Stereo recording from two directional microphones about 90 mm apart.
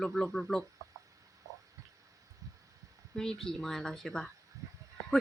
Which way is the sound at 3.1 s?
5° left (ahead or behind).